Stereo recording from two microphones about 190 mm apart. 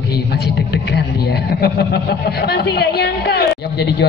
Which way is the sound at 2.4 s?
60° left (ahead or behind).